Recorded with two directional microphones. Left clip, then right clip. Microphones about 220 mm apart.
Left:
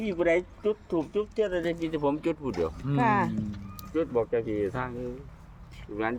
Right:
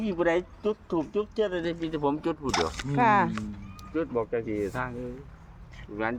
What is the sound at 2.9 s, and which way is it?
Speech, 25° right (ahead or behind).